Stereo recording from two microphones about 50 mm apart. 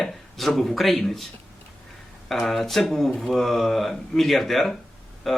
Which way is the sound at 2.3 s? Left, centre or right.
Centre.